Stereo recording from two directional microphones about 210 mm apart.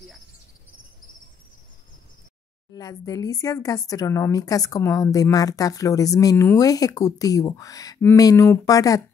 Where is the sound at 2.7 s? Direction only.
15° left (ahead or behind).